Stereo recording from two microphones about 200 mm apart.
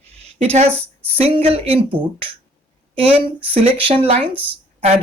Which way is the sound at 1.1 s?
30° right (ahead or behind).